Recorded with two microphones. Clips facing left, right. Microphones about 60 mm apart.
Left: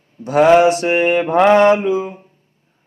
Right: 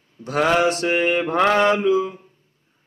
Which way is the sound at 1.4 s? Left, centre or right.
Left.